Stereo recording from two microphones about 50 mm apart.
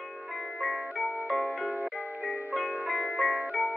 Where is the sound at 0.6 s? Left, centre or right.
Centre.